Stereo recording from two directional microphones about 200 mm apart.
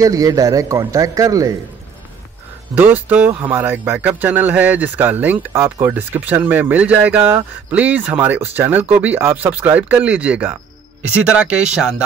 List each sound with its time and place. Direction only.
0.0 s speech: 15° right (ahead or behind)
2.7 s speech: 10° right (ahead or behind)